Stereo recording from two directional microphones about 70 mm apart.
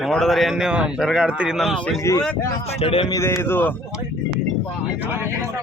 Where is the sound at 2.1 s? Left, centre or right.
Left.